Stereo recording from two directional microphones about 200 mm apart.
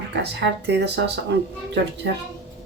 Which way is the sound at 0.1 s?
60° right (ahead or behind).